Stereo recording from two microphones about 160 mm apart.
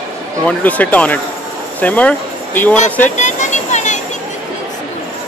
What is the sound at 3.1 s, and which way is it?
Vehicle, 50° left (ahead or behind).